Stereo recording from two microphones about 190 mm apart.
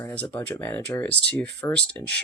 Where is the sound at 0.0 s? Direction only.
10° left (ahead or behind).